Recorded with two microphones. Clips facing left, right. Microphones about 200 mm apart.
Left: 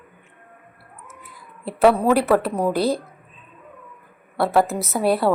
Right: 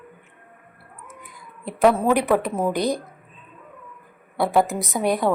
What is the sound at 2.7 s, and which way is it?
Speech, 15° right (ahead or behind).